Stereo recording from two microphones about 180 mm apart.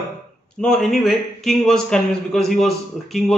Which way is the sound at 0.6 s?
Centre (ahead or behind).